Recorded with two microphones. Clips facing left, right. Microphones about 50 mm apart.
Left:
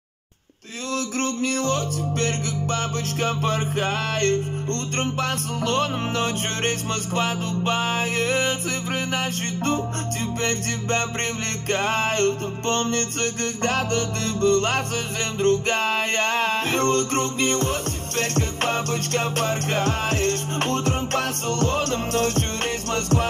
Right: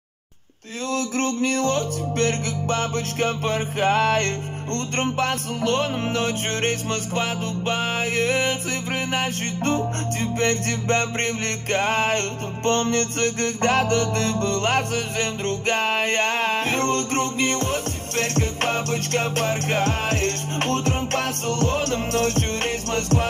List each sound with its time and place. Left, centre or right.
0.9 s music: right
2.6 s music: centre; by 22.4 s right